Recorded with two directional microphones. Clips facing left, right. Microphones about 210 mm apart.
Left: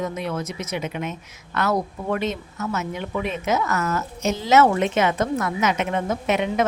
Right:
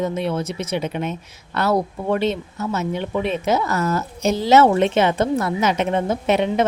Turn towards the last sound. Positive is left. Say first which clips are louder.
# right 3 dB
turn(degrees=-30)  # may be behind; listen again after turning